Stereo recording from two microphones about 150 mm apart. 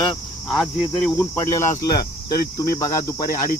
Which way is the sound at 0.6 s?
Centre (ahead or behind).